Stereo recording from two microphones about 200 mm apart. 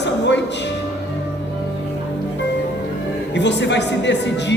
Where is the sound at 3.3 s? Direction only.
60° left (ahead or behind).